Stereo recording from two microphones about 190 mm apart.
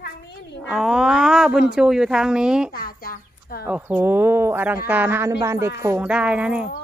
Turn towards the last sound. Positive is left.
turn(degrees=-5)  # may be behind; listen again after turning